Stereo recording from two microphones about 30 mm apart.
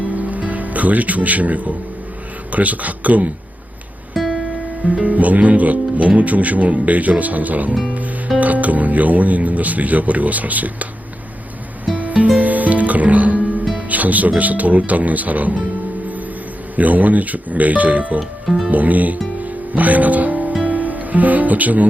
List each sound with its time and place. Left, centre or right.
0.2 s music: right
2.5 s speech: right
4.1 s music: centre
5.0 s speech: right
11.9 s music: right
13.8 s speech: right
16.7 s speech: right
19.4 s music: right
20.7 s speech: right